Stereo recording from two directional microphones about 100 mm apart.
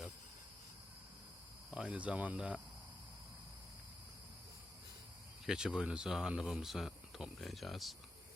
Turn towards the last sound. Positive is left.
turn(degrees=0)  # may be behind; listen again after turning